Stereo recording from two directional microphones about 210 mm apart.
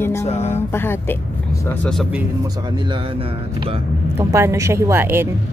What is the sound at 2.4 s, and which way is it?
Speech, 20° right (ahead or behind).